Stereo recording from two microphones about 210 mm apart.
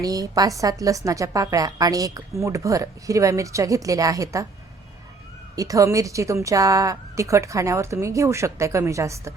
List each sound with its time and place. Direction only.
0.0 s a woman's voice: 15° right (ahead or behind)
5.5 s a woman's voice: 15° right (ahead or behind)